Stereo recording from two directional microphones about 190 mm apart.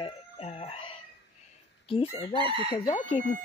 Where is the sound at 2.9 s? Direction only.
40° left (ahead or behind).